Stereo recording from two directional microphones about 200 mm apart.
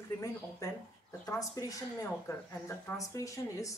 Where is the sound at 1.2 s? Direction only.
15° left (ahead or behind).